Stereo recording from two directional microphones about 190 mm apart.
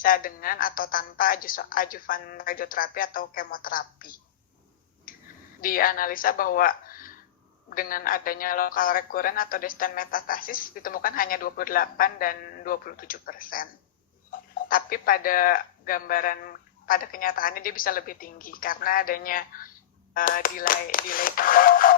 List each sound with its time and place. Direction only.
0.0 s speech: 50° left (ahead or behind)
5.1 s finger snapping: 45° left (ahead or behind)
5.5 s a woman's voice: 50° left (ahead or behind)